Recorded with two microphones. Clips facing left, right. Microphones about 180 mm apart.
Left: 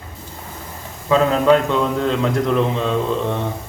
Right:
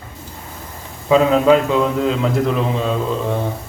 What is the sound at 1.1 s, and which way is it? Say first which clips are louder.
A man's voice: right 2 dB; 5° right (ahead or behind).